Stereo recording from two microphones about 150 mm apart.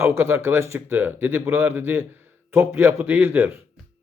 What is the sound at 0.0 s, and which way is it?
Speech, 15° right (ahead or behind).